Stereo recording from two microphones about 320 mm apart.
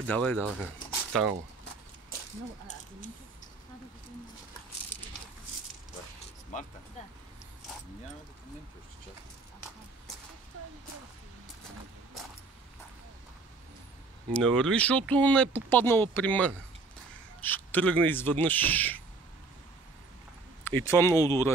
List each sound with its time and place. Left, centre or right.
0.0 s speech: centre
6.5 s speech: left
14.3 s speech: centre
20.6 s speech: centre